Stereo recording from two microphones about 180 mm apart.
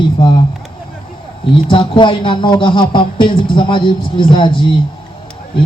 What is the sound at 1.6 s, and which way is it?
Speech, 25° left (ahead or behind).